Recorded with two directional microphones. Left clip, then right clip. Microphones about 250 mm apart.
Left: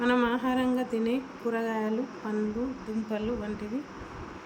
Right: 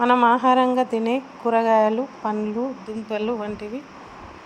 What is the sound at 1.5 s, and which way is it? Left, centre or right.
Speech, right.